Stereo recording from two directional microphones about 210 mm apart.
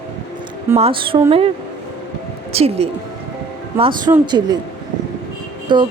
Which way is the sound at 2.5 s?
30° right (ahead or behind).